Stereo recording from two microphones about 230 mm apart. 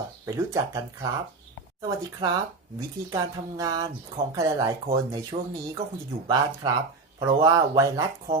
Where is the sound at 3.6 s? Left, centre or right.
Centre.